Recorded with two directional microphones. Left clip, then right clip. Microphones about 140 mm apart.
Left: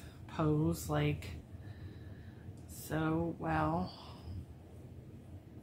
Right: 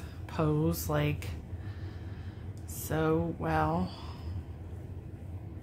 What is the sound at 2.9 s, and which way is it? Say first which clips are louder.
Speech: right 6 dB; 45° right (ahead or behind).